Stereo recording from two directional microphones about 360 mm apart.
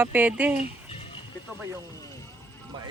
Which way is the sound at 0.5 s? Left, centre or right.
Centre.